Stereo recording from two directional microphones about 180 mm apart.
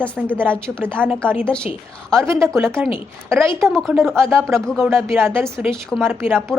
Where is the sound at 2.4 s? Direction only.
15° right (ahead or behind).